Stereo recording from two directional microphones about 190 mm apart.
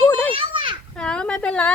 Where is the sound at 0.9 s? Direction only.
5° left (ahead or behind).